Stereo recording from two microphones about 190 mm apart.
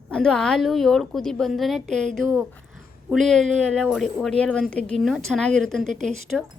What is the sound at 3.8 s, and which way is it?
Speech, centre (ahead or behind).